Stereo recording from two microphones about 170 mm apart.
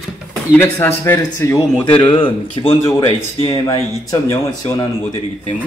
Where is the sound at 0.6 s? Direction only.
15° left (ahead or behind).